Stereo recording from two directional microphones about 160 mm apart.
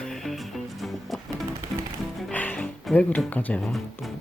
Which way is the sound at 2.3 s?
10° left (ahead or behind).